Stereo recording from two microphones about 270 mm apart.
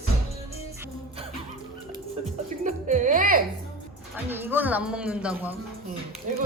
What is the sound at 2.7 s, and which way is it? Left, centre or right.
Music, right.